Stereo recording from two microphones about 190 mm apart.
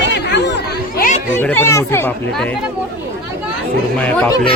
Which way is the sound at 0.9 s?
45° left (ahead or behind).